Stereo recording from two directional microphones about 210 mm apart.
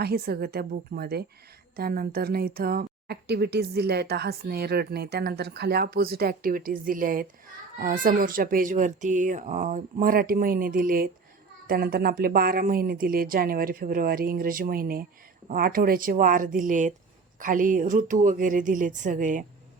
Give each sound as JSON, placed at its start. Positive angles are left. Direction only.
{"t": 0.0, "sound": "speech", "side_deg": -50}